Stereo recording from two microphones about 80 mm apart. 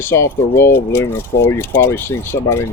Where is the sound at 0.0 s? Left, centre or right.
Left.